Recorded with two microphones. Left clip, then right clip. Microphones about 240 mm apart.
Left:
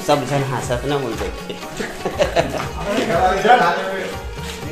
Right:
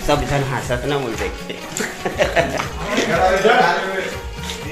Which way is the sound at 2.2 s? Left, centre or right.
Centre.